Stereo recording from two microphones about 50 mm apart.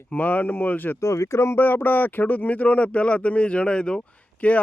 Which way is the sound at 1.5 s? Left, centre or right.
Left.